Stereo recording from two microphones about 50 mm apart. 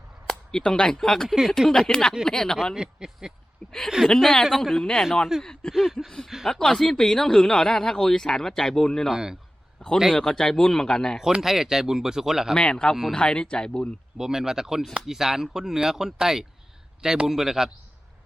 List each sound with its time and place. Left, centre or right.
0.3 s speech: centre
1.4 s speech: centre
1.9 s speech: centre
2.7 s speech: centre
3.6 s speech: left
4.0 s speech: centre
5.7 s speech: centre
6.6 s speech: centre
9.1 s speech: centre
9.8 s a man's voice: centre
11.3 s speech: centre
12.5 s speech: centre
14.2 s speech: centre